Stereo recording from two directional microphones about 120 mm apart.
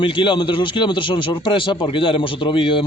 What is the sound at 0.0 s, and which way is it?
Speech, 45° left (ahead or behind).